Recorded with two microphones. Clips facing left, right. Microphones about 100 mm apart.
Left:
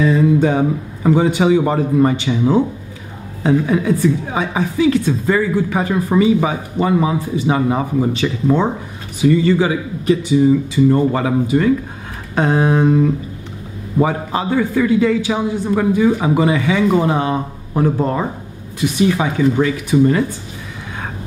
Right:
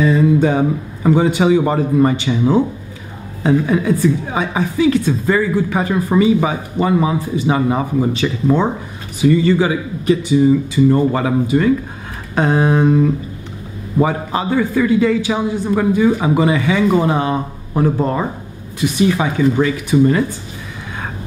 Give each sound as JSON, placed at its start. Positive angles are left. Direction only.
{"t": 0.0, "sound": "a woman's voice", "side_deg": -20}
{"t": 2.4, "sound": "a woman's voice", "side_deg": -30}
{"t": 9.2, "sound": "a woman's voice", "side_deg": -15}
{"t": 18.8, "sound": "a woman's voice", "side_deg": -15}